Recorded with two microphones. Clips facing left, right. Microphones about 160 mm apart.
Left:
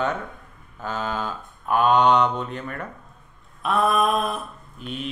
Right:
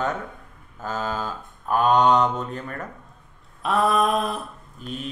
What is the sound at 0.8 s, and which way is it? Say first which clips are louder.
Mantra: even; 40° right (ahead or behind).